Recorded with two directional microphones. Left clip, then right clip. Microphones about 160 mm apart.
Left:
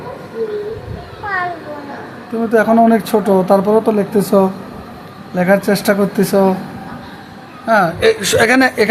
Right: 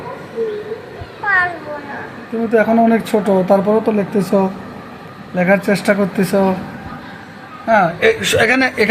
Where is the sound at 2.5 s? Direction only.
10° left (ahead or behind).